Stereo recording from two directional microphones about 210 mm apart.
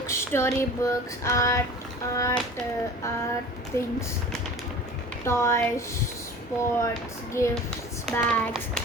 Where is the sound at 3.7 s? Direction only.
15° left (ahead or behind).